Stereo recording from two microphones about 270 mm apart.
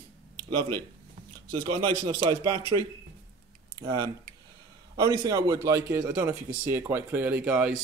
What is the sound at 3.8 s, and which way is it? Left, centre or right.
Speech, centre.